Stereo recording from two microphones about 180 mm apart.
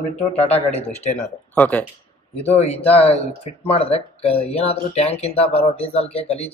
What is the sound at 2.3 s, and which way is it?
Speech, 35° left (ahead or behind).